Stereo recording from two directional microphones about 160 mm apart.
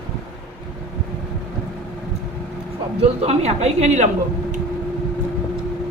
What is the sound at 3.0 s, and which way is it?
Speech, 40° right (ahead or behind).